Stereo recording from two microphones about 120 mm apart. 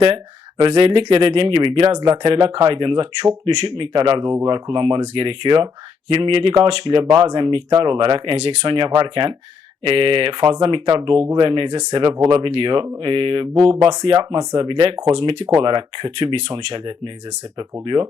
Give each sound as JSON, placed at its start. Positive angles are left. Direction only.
{"t": 0.6, "sound": "speech", "side_deg": -45}
{"t": 4.2, "sound": "speech", "side_deg": -25}
{"t": 4.4, "sound": "speech", "side_deg": -40}